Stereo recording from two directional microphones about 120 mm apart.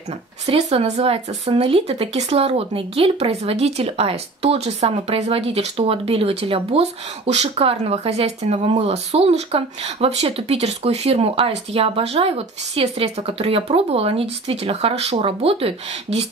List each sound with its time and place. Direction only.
0.5 s speech: 60° right (ahead or behind)